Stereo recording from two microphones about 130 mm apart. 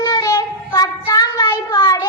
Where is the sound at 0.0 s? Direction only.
30° left (ahead or behind).